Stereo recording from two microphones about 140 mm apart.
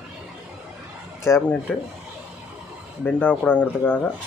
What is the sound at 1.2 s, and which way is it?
Speech, 20° left (ahead or behind).